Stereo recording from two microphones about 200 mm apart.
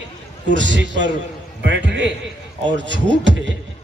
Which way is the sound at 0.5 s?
65° right (ahead or behind).